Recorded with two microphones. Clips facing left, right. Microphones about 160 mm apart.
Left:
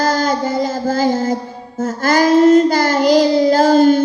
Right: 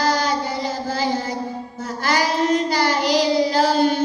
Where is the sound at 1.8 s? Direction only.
45° left (ahead or behind).